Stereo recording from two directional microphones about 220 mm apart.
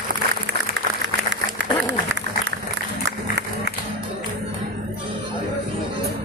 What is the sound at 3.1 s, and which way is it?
Music, 50° right (ahead or behind).